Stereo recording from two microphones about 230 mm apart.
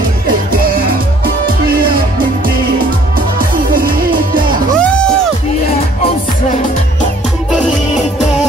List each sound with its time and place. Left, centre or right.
3.2 s music: right
4.7 s music: centre